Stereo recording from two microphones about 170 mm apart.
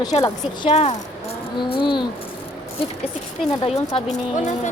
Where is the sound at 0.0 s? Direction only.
25° left (ahead or behind).